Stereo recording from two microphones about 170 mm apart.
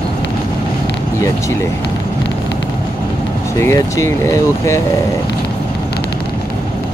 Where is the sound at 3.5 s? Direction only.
15° left (ahead or behind).